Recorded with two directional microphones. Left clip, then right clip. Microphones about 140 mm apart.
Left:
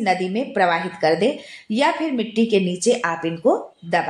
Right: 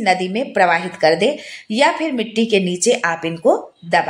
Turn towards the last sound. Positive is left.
turn(degrees=-40)  # may be behind; listen again after turning